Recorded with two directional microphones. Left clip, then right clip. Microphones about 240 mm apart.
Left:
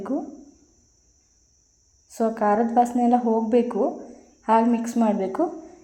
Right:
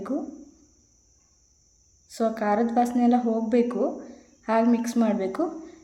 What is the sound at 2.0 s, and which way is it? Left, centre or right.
A woman's voice, centre.